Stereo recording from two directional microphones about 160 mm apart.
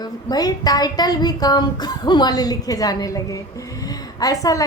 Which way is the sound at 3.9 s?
20° left (ahead or behind).